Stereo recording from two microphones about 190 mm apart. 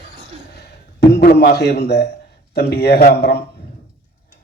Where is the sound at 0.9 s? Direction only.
55° left (ahead or behind).